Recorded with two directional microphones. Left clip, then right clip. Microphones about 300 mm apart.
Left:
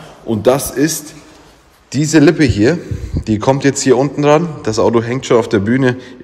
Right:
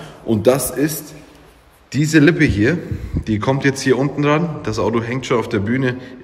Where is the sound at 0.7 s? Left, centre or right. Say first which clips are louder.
Left 4 dB; left.